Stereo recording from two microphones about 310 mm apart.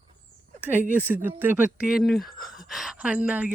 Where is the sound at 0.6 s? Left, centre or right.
Centre.